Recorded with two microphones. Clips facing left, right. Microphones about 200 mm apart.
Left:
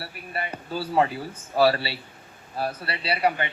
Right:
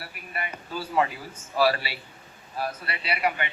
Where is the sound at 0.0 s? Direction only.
30° left (ahead or behind).